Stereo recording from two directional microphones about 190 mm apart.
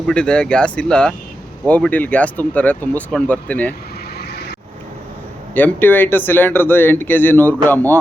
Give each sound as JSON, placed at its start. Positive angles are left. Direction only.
{"t": 0.1, "sound": "speech", "side_deg": 5}
{"t": 4.2, "sound": "vehicle", "side_deg": 55}
{"t": 5.5, "sound": "speech", "side_deg": 10}